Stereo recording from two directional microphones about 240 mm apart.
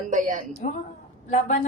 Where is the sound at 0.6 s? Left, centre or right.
Left.